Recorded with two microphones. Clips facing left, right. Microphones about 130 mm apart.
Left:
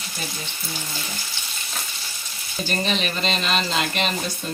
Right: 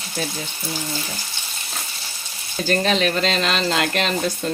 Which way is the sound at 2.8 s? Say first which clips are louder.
Right 5 dB; 90° right.